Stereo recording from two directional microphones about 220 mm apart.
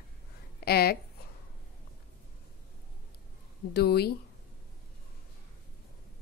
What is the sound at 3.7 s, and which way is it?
Speech, 45° left (ahead or behind).